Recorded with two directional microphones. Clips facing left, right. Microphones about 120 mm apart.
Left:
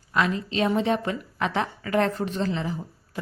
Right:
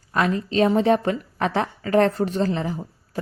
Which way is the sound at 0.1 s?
40° right (ahead or behind).